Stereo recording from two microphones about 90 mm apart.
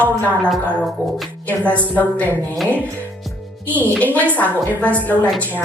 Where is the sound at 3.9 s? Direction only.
15° left (ahead or behind).